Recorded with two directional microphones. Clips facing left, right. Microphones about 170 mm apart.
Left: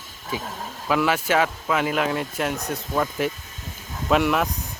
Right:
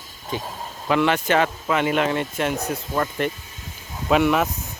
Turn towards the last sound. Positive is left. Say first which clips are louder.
# right 2 dB
turn(degrees=0)  # may be behind; listen again after turning